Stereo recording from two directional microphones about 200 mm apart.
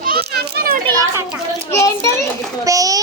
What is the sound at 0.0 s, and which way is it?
Children playing, 50° right (ahead or behind).